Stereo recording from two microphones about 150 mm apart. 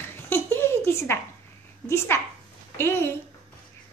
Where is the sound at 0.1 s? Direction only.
15° left (ahead or behind).